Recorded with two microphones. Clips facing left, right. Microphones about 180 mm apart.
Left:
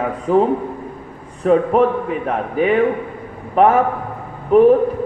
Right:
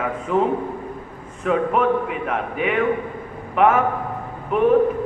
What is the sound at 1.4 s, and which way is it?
A man's voice, 35° left (ahead or behind).